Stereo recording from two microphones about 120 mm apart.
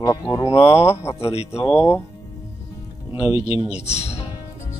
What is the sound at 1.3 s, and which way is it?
Speech, 60° left (ahead or behind).